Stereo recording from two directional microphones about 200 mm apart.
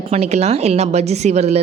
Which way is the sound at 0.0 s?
35° right (ahead or behind).